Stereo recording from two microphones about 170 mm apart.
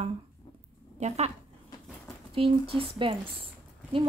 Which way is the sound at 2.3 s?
35° right (ahead or behind).